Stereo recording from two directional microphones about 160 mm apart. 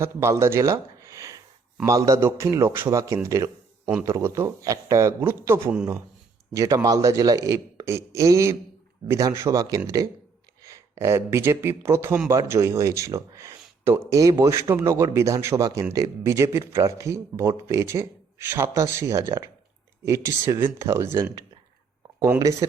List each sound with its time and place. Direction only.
0.0 s speech: 15° right (ahead or behind)
22.2 s speech: 20° right (ahead or behind)